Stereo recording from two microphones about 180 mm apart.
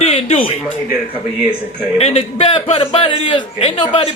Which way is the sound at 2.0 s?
35° left (ahead or behind).